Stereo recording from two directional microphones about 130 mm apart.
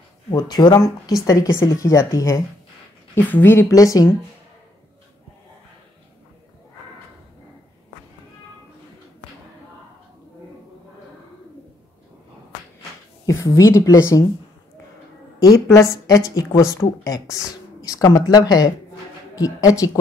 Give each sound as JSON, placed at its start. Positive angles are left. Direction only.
{"t": 0.3, "sound": "a woman's voice", "side_deg": 30}
{"t": 13.3, "sound": "a woman's voice", "side_deg": 25}
{"t": 15.3, "sound": "a woman's voice", "side_deg": 25}